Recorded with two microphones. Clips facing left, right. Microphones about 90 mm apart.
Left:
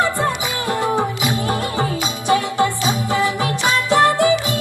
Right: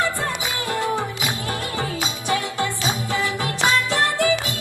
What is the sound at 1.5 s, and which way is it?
Music, 25° left (ahead or behind).